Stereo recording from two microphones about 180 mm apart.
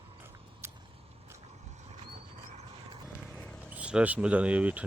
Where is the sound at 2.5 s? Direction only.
35° right (ahead or behind).